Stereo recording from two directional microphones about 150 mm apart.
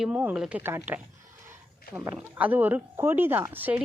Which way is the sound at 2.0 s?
15° right (ahead or behind).